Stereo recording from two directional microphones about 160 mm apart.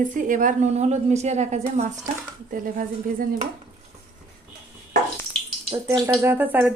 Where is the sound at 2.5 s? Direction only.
60° right (ahead or behind).